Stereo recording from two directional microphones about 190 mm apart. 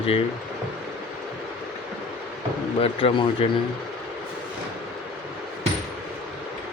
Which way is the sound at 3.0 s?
30° left (ahead or behind).